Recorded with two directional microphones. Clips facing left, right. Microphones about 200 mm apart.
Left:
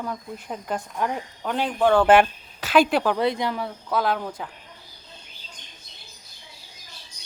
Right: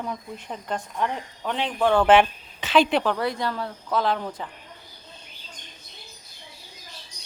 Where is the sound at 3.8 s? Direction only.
5° left (ahead or behind).